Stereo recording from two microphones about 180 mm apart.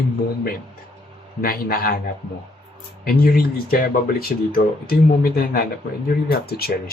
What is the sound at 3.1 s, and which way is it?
Speech, 55° left (ahead or behind).